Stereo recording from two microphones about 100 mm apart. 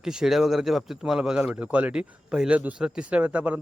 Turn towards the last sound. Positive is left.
turn(degrees=-15)  # may be behind; listen again after turning